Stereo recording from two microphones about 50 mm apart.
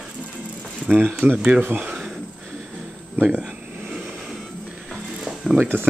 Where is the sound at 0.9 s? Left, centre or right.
Right.